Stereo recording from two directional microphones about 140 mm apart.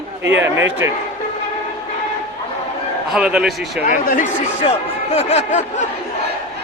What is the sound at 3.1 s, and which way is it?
Speech, 5° right (ahead or behind).